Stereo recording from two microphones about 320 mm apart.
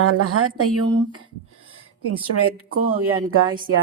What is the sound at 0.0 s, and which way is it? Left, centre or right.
Speech, right.